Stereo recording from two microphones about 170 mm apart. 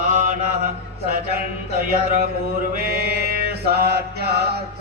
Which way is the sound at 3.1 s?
65° right (ahead or behind).